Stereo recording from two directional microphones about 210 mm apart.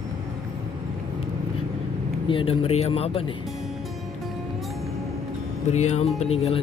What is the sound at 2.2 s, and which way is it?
Speech, 25° left (ahead or behind).